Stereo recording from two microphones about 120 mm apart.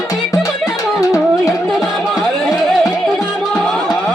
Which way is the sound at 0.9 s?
30° left (ahead or behind).